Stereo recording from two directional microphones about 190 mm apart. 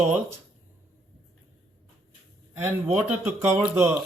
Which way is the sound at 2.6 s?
10° right (ahead or behind).